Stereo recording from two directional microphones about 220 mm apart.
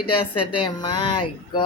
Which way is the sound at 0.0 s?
90° left.